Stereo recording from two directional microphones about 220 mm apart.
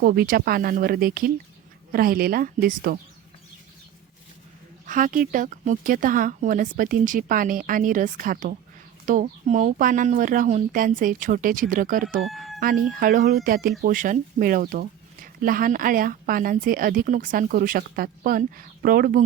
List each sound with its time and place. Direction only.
0.0 s speech: 40° right (ahead or behind)
4.9 s speech: 35° right (ahead or behind)
12.2 s speech: centre (ahead or behind)
12.5 s speech: 40° right (ahead or behind)